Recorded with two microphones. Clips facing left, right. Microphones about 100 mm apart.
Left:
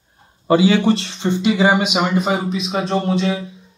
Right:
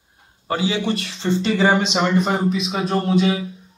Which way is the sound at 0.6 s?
70° left (ahead or behind).